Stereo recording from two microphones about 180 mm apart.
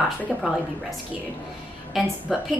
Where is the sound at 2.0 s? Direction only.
Centre (ahead or behind).